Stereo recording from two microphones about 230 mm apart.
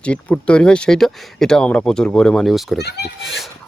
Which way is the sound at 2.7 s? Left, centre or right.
Left.